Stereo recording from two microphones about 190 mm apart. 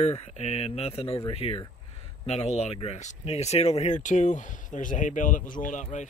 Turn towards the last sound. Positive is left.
turn(degrees=40)  # may be behind; listen again after turning